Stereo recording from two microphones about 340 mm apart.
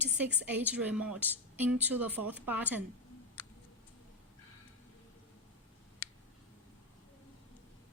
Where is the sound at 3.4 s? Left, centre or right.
Centre.